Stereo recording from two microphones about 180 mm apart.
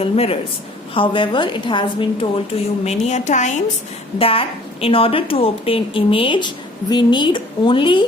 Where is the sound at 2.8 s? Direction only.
40° left (ahead or behind).